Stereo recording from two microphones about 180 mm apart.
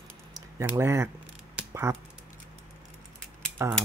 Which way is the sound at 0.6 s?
15° right (ahead or behind).